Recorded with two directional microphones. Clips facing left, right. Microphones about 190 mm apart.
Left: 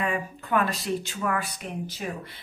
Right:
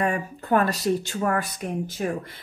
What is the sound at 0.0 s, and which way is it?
Speech, 40° right (ahead or behind).